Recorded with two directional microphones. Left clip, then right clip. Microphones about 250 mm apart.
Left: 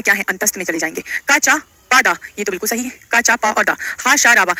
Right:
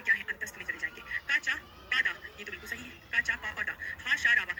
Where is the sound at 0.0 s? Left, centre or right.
Left.